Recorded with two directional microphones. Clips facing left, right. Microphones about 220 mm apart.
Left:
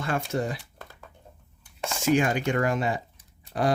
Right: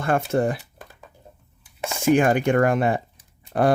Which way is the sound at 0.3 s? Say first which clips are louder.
Right 7 dB; 55° right (ahead or behind).